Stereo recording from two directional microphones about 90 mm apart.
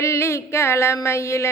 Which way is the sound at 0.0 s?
30° left (ahead or behind).